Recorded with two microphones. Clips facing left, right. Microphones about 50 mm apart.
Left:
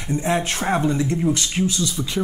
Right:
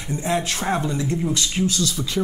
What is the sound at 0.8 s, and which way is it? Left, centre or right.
Speech, left.